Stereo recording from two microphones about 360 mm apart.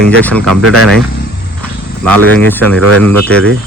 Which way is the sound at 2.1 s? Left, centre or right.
Centre.